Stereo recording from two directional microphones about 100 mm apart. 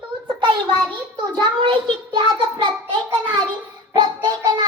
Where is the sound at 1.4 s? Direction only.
55° right (ahead or behind).